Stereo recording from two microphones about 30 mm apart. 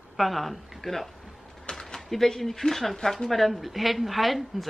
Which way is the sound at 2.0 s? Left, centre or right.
Centre.